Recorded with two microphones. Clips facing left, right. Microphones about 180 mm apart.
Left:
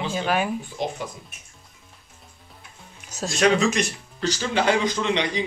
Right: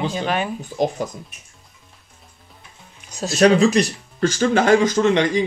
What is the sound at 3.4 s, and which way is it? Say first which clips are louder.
Speech: right 6 dB; 35° right (ahead or behind).